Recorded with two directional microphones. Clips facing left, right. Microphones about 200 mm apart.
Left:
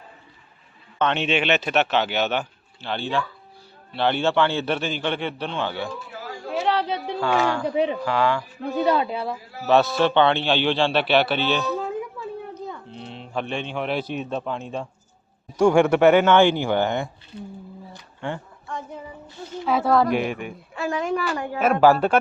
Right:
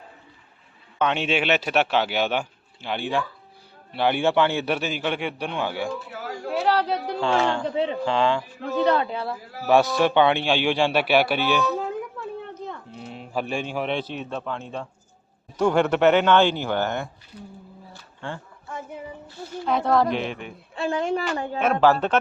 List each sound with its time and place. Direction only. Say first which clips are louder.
0.9 s speech: left 1 dB; 10° right (ahead or behind)
6.5 s a sound: right 1 dB; centre (ahead or behind)
7.2 s a woman's voice: left 1 dB; 25° right (ahead or behind)
7.7 s speech: left 2 dB; 15° left (ahead or behind)
8.0 s a woman's voice: even; 25° right (ahead or behind)
8.7 s speech: even; 15° left (ahead or behind)
9.6 s speech: even; 15° right (ahead or behind)
12.6 s livestock: left 1 dB; centre (ahead or behind)
13.9 s speech: left 2 dB; 15° left (ahead or behind)
17.3 s speech: left 5 dB; 25° left (ahead or behind)
17.9 s a sound: left 4 dB; 20° left (ahead or behind)
19.6 s speech: left 1 dB; 5° left (ahead or behind)
20.7 s a woman's voice: even; 30° right (ahead or behind)
21.6 s speech: left 3 dB; 10° left (ahead or behind)